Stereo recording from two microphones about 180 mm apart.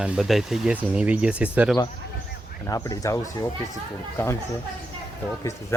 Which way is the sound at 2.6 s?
20° left (ahead or behind).